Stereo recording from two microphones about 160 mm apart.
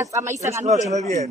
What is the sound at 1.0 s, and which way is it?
Speech, 20° left (ahead or behind).